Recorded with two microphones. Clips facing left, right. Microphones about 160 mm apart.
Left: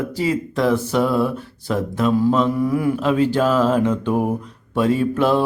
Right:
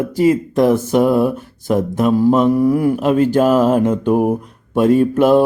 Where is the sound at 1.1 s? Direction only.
15° right (ahead or behind).